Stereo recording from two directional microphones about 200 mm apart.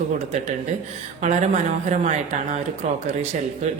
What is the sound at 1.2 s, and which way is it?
Speech, 35° right (ahead or behind).